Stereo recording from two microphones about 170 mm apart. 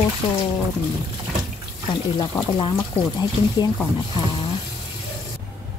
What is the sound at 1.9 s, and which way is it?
Speech, 30° left (ahead or behind).